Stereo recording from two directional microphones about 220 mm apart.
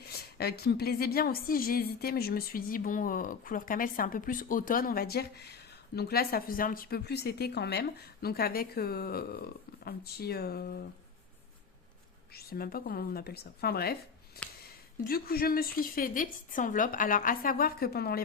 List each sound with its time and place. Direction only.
0.0 s a woman's voice: 45° left (ahead or behind)
12.3 s a woman's voice: 45° left (ahead or behind)
14.4 s a sound: 45° left (ahead or behind)
15.0 s a woman's voice: 45° left (ahead or behind)